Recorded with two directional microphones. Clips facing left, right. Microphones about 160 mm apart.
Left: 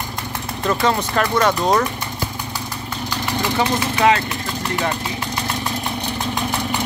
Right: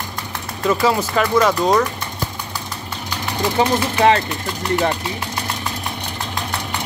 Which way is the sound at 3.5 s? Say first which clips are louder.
Right 4 dB; 30° right (ahead or behind).